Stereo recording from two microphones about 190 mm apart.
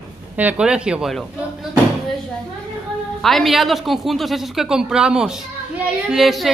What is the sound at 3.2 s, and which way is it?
A woman's voice, centre (ahead or behind).